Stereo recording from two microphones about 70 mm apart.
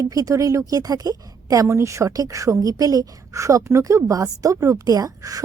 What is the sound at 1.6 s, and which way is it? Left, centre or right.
A woman's voice, right.